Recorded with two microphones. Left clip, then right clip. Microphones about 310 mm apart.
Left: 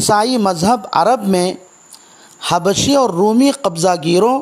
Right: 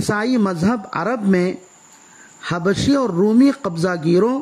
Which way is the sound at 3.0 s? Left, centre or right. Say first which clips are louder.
Left 3 dB; left.